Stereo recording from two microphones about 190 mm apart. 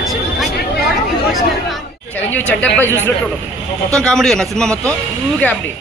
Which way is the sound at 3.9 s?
5° left (ahead or behind).